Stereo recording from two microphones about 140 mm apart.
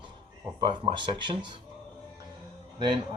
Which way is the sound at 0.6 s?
35° right (ahead or behind).